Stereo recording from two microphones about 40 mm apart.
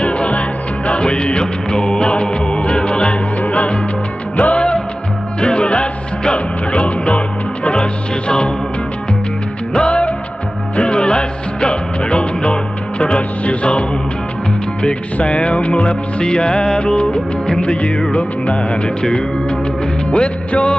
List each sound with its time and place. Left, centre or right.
0.0 s music: left
9.8 s music: left
15.2 s music: left